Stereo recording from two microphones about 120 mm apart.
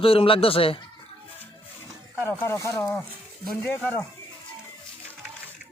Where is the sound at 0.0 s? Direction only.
50° left (ahead or behind).